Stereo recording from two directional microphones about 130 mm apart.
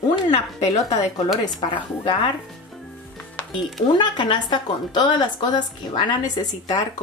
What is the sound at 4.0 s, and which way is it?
A woman's voice, 35° left (ahead or behind).